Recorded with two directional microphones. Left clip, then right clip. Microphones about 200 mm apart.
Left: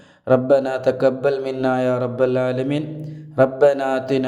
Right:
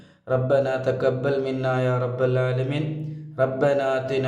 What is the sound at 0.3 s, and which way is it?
Speech, 35° left (ahead or behind).